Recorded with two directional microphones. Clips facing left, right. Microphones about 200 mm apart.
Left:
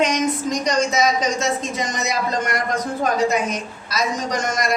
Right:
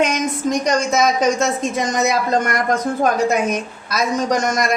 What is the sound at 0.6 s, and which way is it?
Speech, 50° right (ahead or behind).